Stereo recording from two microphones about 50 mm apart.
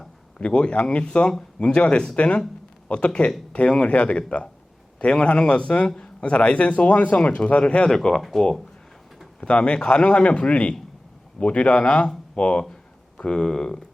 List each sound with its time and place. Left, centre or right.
0.3 s a man's voice: left
7.9 s speech: centre
9.4 s a man's voice: left